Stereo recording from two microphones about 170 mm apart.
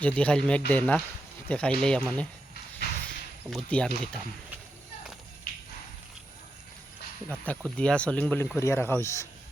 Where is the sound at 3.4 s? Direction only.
Centre (ahead or behind).